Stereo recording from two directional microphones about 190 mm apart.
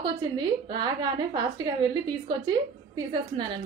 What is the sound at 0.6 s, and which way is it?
A woman's voice, 20° right (ahead or behind).